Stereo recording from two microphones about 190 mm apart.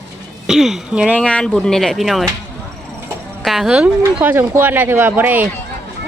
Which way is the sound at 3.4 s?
Centre (ahead or behind).